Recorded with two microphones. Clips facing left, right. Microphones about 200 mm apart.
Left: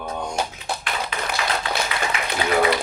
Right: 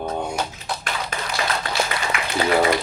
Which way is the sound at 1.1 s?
45° right (ahead or behind).